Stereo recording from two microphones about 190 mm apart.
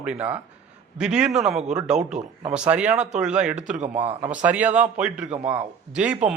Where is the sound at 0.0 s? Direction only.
5° right (ahead or behind).